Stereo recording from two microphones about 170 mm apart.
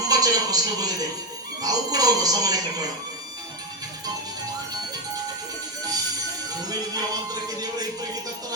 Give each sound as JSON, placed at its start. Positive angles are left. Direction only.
{"t": 0.0, "sound": "music", "side_deg": -20}
{"t": 1.6, "sound": "speech", "side_deg": -20}
{"t": 6.6, "sound": "music", "side_deg": -20}